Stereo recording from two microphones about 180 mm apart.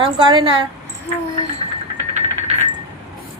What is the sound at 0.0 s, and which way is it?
Speech, 25° right (ahead or behind).